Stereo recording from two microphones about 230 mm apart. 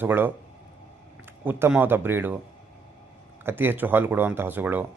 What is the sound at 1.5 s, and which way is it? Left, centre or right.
Speech, centre.